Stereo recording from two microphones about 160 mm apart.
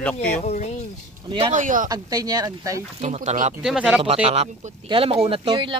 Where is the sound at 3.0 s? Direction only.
45° right (ahead or behind).